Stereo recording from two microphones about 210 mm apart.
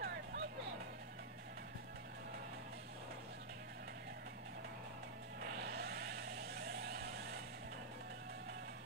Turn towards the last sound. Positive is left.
turn(degrees=-50)  # may be behind; listen again after turning